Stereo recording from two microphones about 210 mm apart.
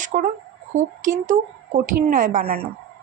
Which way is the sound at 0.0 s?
35° right (ahead or behind).